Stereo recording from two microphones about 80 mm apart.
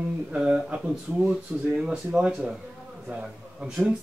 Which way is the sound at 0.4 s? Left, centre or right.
Centre.